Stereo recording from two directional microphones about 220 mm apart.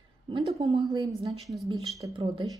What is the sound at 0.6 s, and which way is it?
Speech, 25° right (ahead or behind).